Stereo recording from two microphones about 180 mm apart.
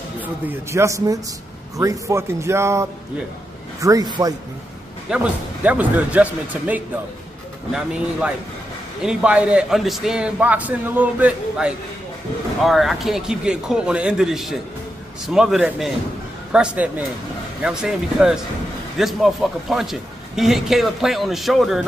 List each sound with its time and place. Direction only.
0.5 s a man's voice: 15° right (ahead or behind)
5.1 s a man's voice: 10° right (ahead or behind)